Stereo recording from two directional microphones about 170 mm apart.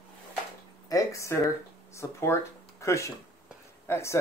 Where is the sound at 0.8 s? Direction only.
20° left (ahead or behind).